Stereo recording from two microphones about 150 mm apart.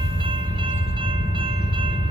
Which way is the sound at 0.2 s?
35° right (ahead or behind).